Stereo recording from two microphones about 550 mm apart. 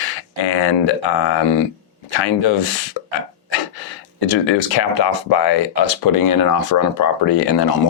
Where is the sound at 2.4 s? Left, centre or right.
Left.